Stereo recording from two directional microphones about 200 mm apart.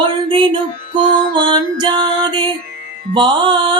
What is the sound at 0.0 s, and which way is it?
Music, 25° right (ahead or behind).